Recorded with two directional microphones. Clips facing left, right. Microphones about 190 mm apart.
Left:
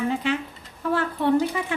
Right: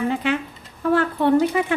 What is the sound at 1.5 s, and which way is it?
Speech, 75° right (ahead or behind).